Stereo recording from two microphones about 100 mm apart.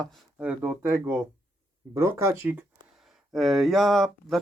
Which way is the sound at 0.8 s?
25° right (ahead or behind).